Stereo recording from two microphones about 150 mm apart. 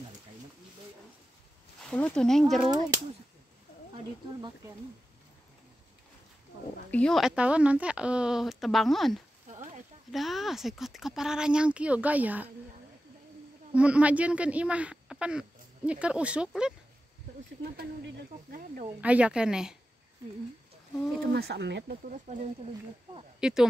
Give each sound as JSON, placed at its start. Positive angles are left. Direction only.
{"t": 1.9, "sound": "speech", "side_deg": 10}
{"t": 6.9, "sound": "speech", "side_deg": 5}
{"t": 13.7, "sound": "speech", "side_deg": -10}
{"t": 18.9, "sound": "speech", "side_deg": -10}
{"t": 21.2, "sound": "speech", "side_deg": -90}
{"t": 23.4, "sound": "speech", "side_deg": -5}